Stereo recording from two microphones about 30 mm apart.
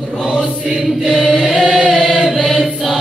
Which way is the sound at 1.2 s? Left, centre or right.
Left.